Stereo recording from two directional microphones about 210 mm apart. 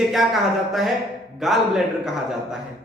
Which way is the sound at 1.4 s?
Centre (ahead or behind).